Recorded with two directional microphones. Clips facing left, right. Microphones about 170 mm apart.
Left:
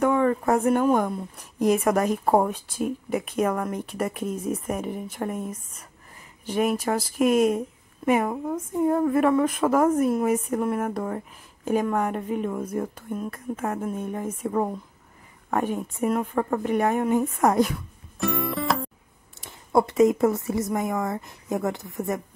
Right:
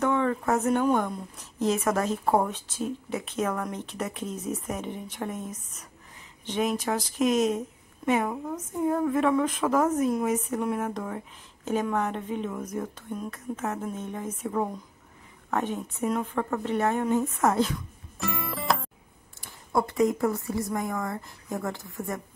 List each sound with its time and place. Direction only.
0.0 s a sound: 10° left (ahead or behind)
0.7 s a woman's voice: 10° left (ahead or behind)
18.2 s music: centre (ahead or behind)
19.4 s speech: 20° left (ahead or behind)